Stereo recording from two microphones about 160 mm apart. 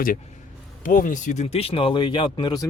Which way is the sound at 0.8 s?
55° left (ahead or behind).